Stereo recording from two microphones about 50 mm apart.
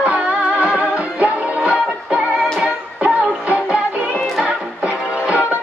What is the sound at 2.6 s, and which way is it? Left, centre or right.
Music, right.